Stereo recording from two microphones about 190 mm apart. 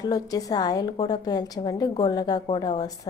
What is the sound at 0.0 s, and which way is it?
A woman's voice, 20° left (ahead or behind).